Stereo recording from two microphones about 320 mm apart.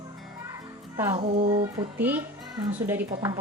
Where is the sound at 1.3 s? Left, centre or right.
Centre.